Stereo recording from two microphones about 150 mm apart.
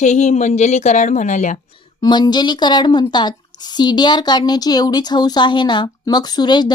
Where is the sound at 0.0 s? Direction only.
50° left (ahead or behind).